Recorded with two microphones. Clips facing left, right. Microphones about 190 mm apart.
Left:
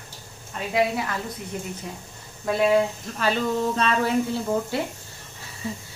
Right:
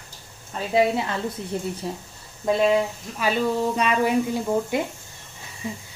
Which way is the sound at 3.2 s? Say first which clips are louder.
Right 1 dB; 10° right (ahead or behind).